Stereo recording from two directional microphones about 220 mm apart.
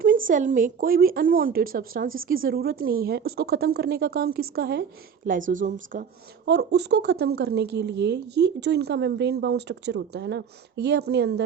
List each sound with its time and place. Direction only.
0.3 s a woman's voice: 35° right (ahead or behind)